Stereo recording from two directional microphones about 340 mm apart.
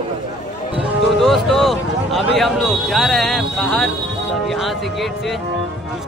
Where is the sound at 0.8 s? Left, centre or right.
Centre.